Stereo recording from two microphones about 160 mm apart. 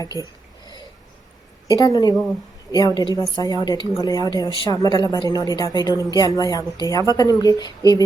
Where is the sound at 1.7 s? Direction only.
25° left (ahead or behind).